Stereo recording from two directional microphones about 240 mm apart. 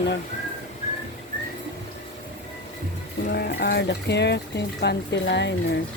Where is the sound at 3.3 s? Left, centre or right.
Left.